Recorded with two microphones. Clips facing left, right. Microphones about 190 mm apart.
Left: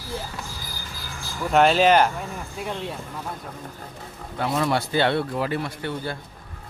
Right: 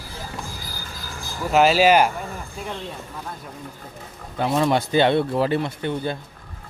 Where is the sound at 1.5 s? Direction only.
5° right (ahead or behind).